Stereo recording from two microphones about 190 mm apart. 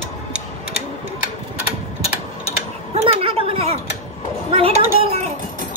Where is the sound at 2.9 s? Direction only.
30° right (ahead or behind).